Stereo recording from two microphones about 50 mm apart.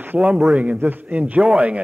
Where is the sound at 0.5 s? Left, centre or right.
Right.